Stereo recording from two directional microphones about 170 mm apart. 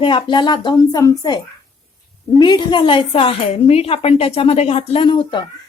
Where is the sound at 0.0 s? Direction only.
30° left (ahead or behind).